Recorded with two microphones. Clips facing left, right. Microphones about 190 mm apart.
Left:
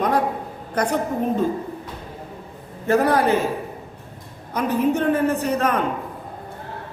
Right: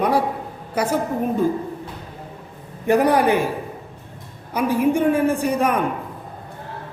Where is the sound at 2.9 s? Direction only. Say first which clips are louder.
Right 1 dB; 15° right (ahead or behind).